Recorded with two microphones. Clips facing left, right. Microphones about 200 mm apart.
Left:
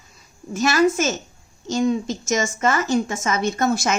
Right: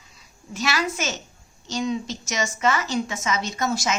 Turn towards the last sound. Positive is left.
turn(degrees=55)  # may be behind; listen again after turning